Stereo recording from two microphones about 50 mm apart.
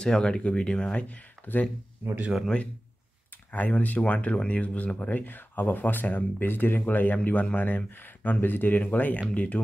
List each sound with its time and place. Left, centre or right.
0.0 s speech: centre
1.0 s speech: left
3.5 s speech: left